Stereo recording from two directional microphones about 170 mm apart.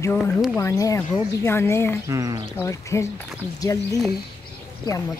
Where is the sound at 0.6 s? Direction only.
20° left (ahead or behind).